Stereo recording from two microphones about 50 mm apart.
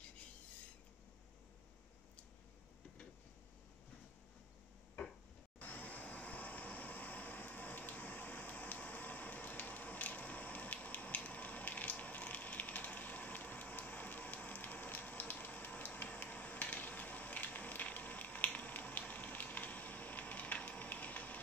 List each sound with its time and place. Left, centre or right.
5.6 s vehicle: left